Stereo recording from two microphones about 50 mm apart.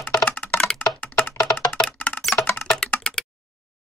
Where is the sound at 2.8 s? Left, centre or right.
Centre.